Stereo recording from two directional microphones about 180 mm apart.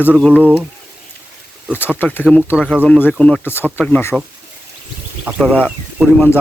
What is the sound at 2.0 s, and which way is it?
Speech, 10° left (ahead or behind).